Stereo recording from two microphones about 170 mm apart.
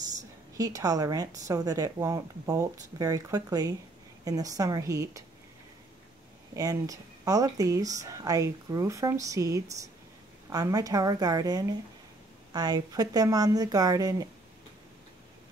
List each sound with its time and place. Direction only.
0.6 s a woman's voice: 20° right (ahead or behind)
6.5 s a woman's voice: 20° right (ahead or behind)